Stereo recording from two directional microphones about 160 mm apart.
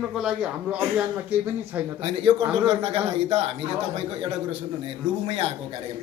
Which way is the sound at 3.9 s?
40° right (ahead or behind).